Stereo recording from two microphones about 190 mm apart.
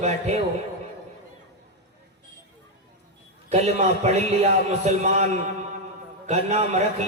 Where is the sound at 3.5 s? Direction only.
35° right (ahead or behind).